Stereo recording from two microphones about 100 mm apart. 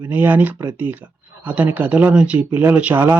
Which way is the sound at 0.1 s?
20° right (ahead or behind).